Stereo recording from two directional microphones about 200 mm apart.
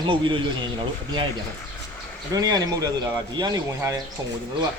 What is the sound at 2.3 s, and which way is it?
A man's voice, 20° right (ahead or behind).